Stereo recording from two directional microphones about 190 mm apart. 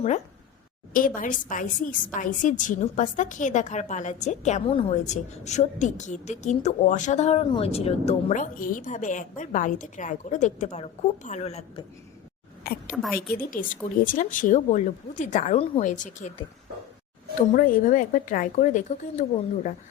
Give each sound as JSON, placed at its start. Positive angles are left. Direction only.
{"t": 0.9, "sound": "a woman's voice", "side_deg": 45}
{"t": 12.9, "sound": "a woman's voice", "side_deg": 0}
{"t": 13.1, "sound": "a woman's voice", "side_deg": 50}
{"t": 17.5, "sound": "a woman's voice", "side_deg": 45}